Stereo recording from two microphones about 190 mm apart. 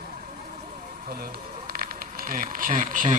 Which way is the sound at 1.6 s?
50° right (ahead or behind).